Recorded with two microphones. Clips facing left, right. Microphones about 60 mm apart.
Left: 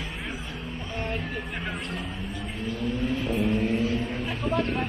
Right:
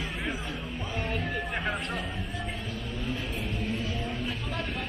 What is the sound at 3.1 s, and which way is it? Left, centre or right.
Music, left.